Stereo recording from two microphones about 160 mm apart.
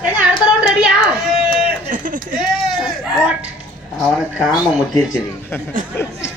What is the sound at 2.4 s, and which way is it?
A man's voice, centre (ahead or behind).